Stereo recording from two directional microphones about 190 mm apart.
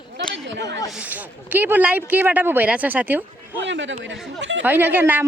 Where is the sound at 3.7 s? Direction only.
75° right (ahead or behind).